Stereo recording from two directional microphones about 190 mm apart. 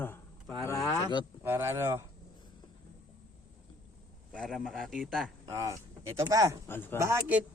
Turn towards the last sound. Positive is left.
turn(degrees=-10)  # may be behind; listen again after turning